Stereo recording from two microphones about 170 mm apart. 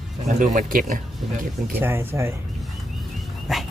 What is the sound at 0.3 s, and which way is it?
Speech, 45° right (ahead or behind).